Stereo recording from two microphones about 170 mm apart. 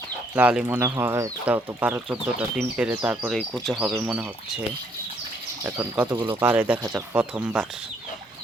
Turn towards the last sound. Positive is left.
turn(degrees=-5)  # may be behind; listen again after turning